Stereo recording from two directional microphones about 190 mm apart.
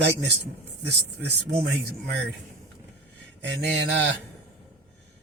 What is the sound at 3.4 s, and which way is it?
Speech, 65° right (ahead or behind).